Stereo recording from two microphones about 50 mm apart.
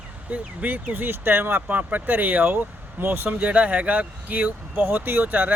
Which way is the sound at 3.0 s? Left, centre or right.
Right.